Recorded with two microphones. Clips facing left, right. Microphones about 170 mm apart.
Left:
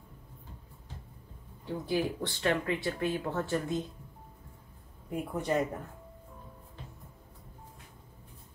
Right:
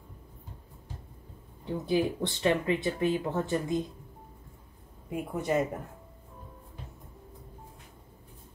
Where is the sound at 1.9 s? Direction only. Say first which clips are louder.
Right 4 dB; 20° right (ahead or behind).